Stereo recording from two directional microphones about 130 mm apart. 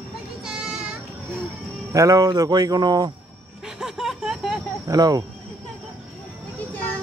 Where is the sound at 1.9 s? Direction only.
25° right (ahead or behind).